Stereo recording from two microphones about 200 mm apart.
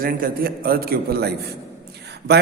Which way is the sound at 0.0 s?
45° right (ahead or behind).